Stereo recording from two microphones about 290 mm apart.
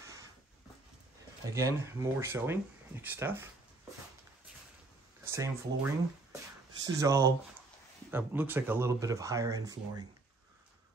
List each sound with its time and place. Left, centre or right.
0.0 s a sound: centre
1.4 s speech: centre
5.2 s speech: centre
7.0 s speech: centre